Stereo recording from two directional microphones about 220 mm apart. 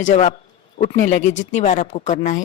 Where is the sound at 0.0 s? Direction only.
35° left (ahead or behind).